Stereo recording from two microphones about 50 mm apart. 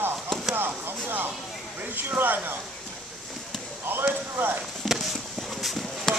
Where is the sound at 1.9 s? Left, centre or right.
Right.